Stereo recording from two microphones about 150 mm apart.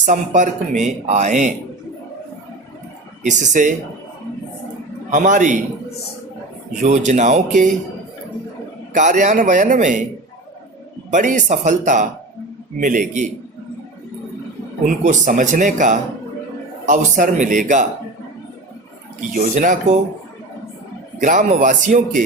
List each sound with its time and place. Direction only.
0.0 s a man's voice: 55° right (ahead or behind)
3.2 s a man's voice: 55° right (ahead or behind)
5.1 s a man's voice: 55° right (ahead or behind)
6.8 s speech: 50° right (ahead or behind)
8.9 s a man's voice: 55° right (ahead or behind)
11.1 s a man's voice: 55° right (ahead or behind)
14.8 s a man's voice: 55° right (ahead or behind)
19.3 s a man's voice: 60° right (ahead or behind)
21.2 s a man's voice: 55° right (ahead or behind)